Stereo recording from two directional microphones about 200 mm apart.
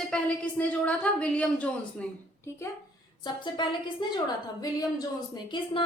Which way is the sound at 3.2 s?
20° left (ahead or behind).